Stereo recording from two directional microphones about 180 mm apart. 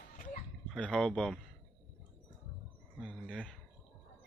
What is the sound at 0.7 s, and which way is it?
Speech, 5° left (ahead or behind).